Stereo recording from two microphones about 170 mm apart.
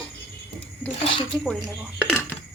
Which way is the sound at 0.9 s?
35° left (ahead or behind).